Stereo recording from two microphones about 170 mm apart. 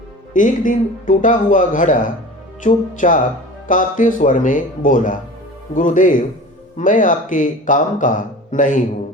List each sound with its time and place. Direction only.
0.3 s speech: 50° left (ahead or behind)